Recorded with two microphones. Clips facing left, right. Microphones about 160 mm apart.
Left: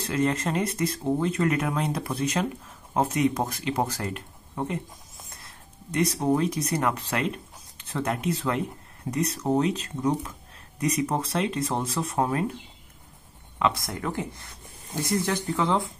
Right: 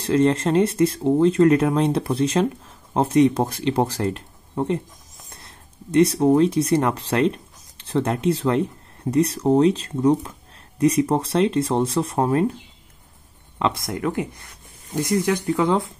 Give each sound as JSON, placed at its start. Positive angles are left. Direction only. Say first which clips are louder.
{"t": 0.0, "sound": "speech", "louder": "right 7 dB", "side_deg": -30}
{"t": 5.4, "sound": "speech", "louder": "right 4 dB", "side_deg": -30}
{"t": 13.6, "sound": "speech", "louder": "right 3 dB", "side_deg": -25}